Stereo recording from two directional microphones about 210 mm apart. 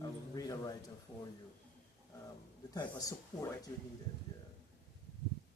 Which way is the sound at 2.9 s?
15° left (ahead or behind).